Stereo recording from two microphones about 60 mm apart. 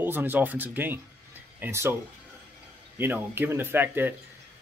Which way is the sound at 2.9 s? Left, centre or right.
Right.